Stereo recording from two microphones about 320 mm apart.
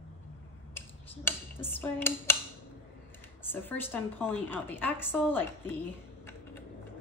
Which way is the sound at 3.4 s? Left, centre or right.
Centre.